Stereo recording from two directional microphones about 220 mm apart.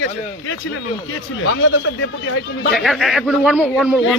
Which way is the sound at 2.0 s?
55° left (ahead or behind).